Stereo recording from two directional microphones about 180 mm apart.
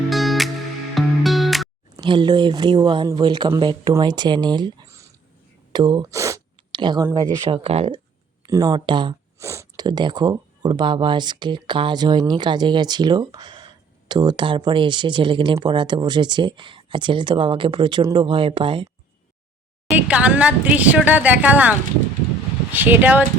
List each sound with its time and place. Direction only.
0.1 s music: centre (ahead or behind)
2.0 s speech: 25° right (ahead or behind)
7.6 s speech: 35° right (ahead or behind)
8.4 s speech: 20° right (ahead or behind)
9.4 s speech: 15° right (ahead or behind)
20.0 s speech: 5° right (ahead or behind)